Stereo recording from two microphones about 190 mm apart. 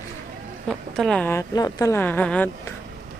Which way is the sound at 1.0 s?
5° left (ahead or behind).